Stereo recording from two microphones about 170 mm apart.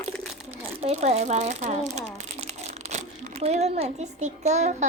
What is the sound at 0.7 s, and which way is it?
A child's voice, 40° right (ahead or behind).